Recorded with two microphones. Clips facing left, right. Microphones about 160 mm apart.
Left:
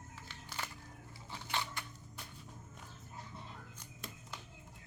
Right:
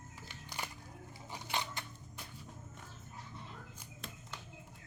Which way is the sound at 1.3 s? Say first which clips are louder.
Right 1 dB; 15° right (ahead or behind).